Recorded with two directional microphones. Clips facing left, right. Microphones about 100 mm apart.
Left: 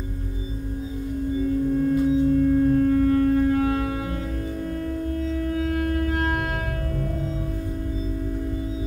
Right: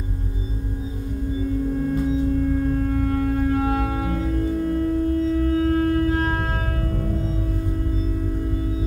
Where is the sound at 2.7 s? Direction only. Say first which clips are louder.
Left 4 dB; 35° right (ahead or behind).